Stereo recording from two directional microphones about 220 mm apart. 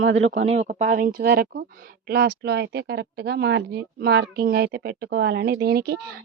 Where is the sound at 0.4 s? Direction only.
30° right (ahead or behind).